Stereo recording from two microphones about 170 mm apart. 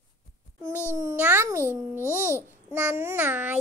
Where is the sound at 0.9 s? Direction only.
10° right (ahead or behind).